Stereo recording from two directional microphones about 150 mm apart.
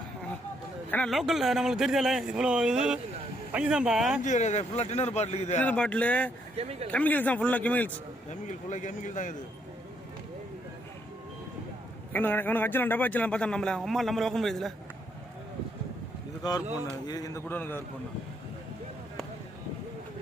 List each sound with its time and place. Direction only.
0.9 s a man's voice: 10° left (ahead or behind)
1.1 s speech: centre (ahead or behind)
4.2 s a man's voice: 50° left (ahead or behind)
5.5 s speech: 10° left (ahead or behind)
6.6 s speech: 45° right (ahead or behind)
6.9 s speech: 10° left (ahead or behind)
8.3 s speech: 55° left (ahead or behind)
12.1 s speech: 10° left (ahead or behind)
16.4 s speech: 25° left (ahead or behind)